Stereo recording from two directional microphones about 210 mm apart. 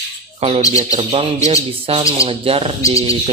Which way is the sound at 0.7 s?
30° right (ahead or behind).